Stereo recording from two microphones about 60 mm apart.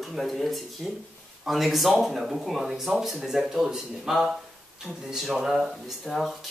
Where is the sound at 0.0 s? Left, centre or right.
Centre.